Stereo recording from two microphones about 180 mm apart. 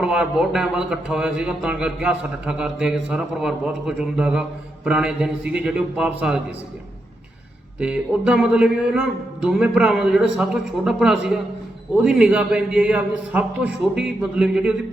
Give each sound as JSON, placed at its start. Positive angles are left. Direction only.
{"t": 0.0, "sound": "a man's voice", "side_deg": -5}
{"t": 7.8, "sound": "a man's voice", "side_deg": -5}